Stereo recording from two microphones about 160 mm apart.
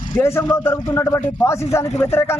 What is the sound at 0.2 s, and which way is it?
Speech, 15° left (ahead or behind).